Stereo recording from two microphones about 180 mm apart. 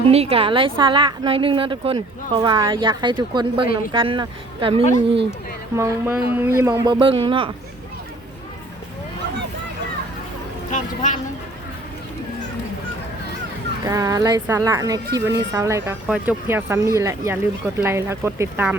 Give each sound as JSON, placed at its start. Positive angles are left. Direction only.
{"t": 0.1, "sound": "a woman's voice", "side_deg": -35}
{"t": 5.7, "sound": "a woman's voice", "side_deg": -15}
{"t": 10.7, "sound": "speech", "side_deg": 45}
{"t": 13.8, "sound": "a woman's voice", "side_deg": -20}